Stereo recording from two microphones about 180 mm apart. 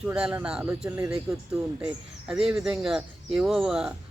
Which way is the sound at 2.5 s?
Centre (ahead or behind).